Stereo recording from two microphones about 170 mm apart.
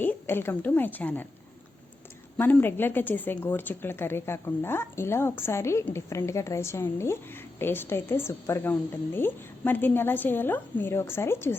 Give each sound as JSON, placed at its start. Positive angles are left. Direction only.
{"t": 0.0, "sound": "a woman's voice", "side_deg": 10}
{"t": 2.4, "sound": "speech", "side_deg": 10}